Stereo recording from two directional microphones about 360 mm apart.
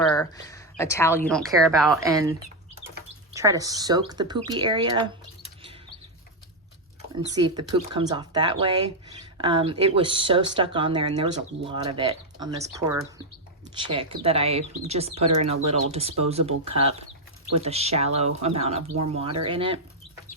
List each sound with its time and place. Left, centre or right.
0.0 s speech: centre
3.3 s speech: centre
7.2 s speech: centre